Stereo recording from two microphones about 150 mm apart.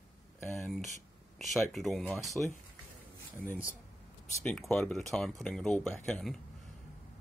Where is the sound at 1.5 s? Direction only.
Centre (ahead or behind).